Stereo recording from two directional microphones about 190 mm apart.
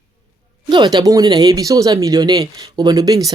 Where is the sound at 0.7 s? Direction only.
20° right (ahead or behind).